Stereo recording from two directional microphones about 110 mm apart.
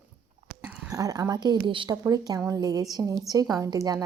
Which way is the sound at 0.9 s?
35° right (ahead or behind).